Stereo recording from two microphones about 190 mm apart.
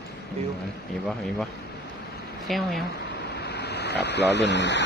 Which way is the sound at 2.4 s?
Centre (ahead or behind).